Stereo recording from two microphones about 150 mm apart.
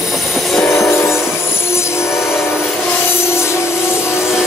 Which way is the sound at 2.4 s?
15° left (ahead or behind).